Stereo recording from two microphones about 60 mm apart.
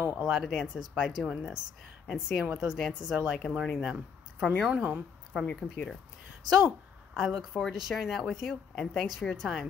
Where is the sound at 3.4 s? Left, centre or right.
Centre.